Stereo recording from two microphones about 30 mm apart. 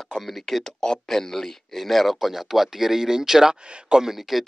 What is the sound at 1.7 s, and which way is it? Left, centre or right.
Speech, centre.